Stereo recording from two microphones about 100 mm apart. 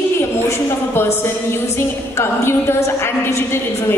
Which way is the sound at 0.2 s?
25° left (ahead or behind).